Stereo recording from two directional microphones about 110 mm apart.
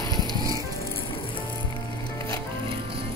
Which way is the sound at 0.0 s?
35° left (ahead or behind).